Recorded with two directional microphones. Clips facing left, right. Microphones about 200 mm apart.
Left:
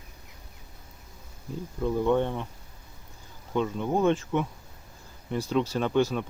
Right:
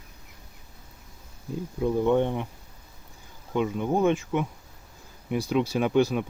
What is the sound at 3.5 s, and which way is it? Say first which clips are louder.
Speech: right 1 dB; 10° right (ahead or behind).